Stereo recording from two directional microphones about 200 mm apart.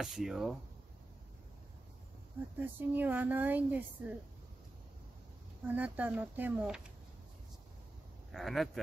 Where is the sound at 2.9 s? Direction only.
10° right (ahead or behind).